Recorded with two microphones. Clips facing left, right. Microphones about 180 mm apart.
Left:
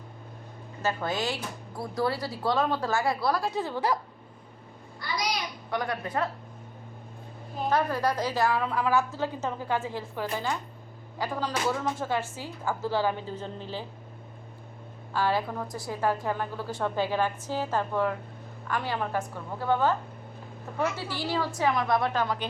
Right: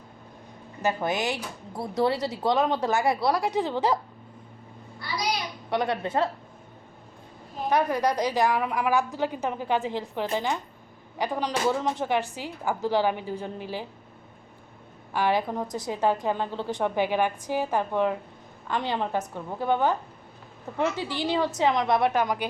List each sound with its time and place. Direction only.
0.8 s speech: 15° right (ahead or behind)
5.7 s speech: 25° right (ahead or behind)
7.7 s a woman's voice: 15° right (ahead or behind)
15.1 s speech: 15° right (ahead or behind)